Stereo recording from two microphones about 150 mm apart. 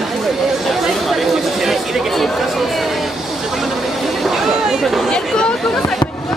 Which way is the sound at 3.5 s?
Centre (ahead or behind).